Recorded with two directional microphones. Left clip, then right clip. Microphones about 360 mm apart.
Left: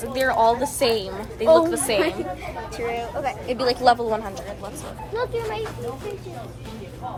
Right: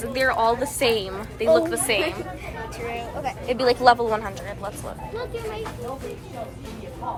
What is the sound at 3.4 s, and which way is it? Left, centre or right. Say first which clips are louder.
Speech: right 2 dB; centre.